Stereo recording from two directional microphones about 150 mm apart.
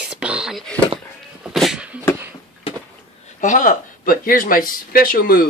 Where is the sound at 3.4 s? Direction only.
55° left (ahead or behind); by 5.4 s 75° left (ahead or behind).